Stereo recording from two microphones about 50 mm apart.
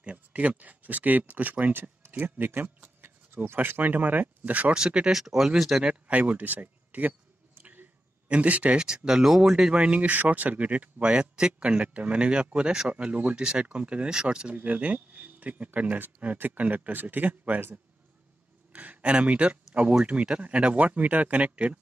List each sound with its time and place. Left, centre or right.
0.0 s speech: right
4.7 s speech: centre
5.1 s speech: centre
5.9 s speech: right
8.3 s speech: right
8.7 s speech: centre
14.5 s speech: right
18.7 s speech: right